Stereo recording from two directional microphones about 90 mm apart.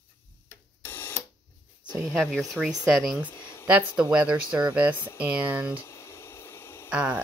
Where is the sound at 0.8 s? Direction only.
25° left (ahead or behind).